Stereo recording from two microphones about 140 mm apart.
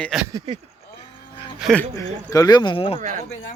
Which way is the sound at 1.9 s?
25° left (ahead or behind).